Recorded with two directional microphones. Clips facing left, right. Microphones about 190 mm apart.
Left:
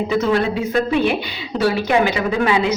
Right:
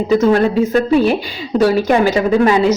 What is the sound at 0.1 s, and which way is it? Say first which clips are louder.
A woman's voice: right 8 dB; 45° right (ahead or behind).